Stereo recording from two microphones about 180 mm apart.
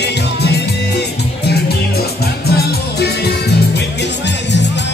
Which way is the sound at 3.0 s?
65° left (ahead or behind).